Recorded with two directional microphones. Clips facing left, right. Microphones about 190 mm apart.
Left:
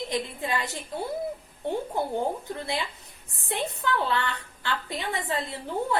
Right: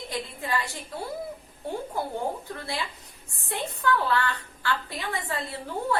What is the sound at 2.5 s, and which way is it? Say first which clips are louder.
A woman's voice: left 2 dB; 20° left (ahead or behind).